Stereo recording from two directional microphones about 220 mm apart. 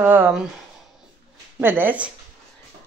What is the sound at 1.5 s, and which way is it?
Speech, 10° right (ahead or behind).